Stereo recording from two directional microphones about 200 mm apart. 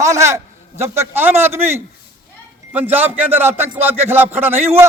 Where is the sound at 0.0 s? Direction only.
15° right (ahead or behind).